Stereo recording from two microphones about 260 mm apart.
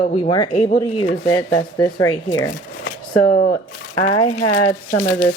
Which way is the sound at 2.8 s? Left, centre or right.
Left.